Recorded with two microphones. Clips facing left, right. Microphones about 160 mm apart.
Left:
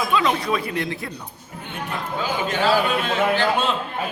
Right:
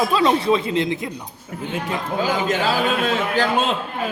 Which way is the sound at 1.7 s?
90° right.